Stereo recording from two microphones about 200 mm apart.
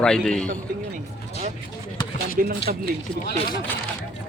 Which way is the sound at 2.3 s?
50° right (ahead or behind).